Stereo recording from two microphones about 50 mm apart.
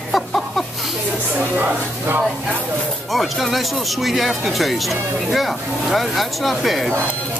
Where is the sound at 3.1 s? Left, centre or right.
Centre.